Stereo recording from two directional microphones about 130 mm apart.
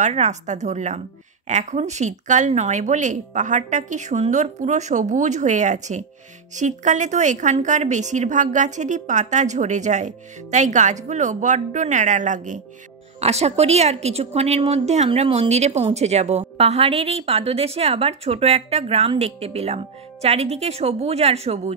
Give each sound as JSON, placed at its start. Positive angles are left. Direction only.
{"t": 0.0, "sound": "a woman's voice", "side_deg": -65}
{"t": 13.2, "sound": "a woman's voice", "side_deg": -55}
{"t": 15.0, "sound": "a woman's voice", "side_deg": -50}